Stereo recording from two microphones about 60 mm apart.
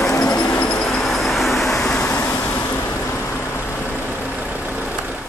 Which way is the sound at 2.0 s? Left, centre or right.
Left.